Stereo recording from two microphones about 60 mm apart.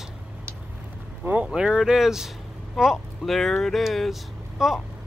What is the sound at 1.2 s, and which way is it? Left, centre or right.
Speech, right.